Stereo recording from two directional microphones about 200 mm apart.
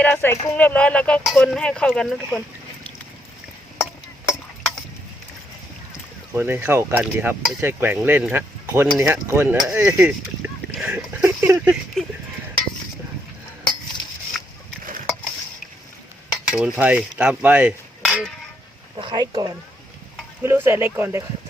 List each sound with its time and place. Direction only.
0.0 s speech: 10° left (ahead or behind)
6.3 s cutlery: 10° right (ahead or behind)
10.7 s a sound: 5° right (ahead or behind)
14.3 s a sound: centre (ahead or behind)
16.5 s cutlery: 5° right (ahead or behind)
18.9 s speech: 20° right (ahead or behind)
20.4 s cutlery: 15° right (ahead or behind)